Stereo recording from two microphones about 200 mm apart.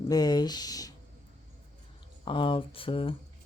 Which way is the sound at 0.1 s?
20° left (ahead or behind).